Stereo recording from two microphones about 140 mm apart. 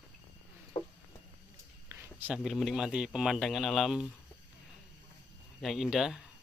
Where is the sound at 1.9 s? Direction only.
15° right (ahead or behind).